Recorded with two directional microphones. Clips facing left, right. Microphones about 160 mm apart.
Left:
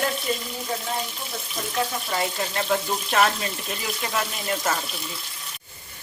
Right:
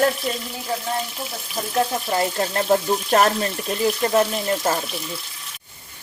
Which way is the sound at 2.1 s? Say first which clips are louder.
Right 5 dB; 45° right (ahead or behind).